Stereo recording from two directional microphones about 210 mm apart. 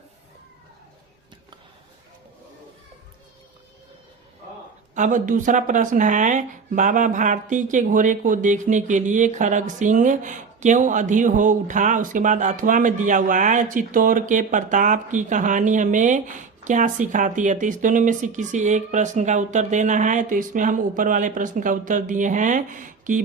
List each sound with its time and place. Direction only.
4.9 s speech: 35° right (ahead or behind)